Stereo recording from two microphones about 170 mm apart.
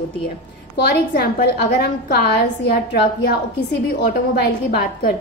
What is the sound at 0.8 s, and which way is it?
A woman's voice, 70° left (ahead or behind).